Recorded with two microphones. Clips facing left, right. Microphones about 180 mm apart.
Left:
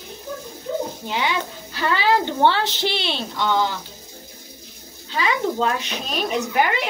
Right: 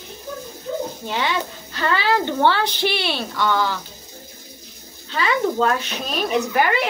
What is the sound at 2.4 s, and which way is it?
A woman's voice, 20° left (ahead or behind).